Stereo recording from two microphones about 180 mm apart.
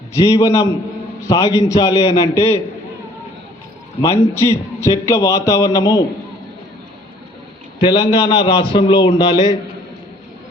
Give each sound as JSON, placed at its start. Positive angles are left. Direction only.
{"t": 0.1, "sound": "a man's voice", "side_deg": 20}
{"t": 4.0, "sound": "a man's voice", "side_deg": 15}
{"t": 7.8, "sound": "a man's voice", "side_deg": 25}